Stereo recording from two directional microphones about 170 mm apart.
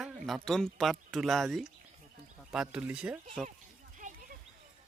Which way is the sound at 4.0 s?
50° right (ahead or behind).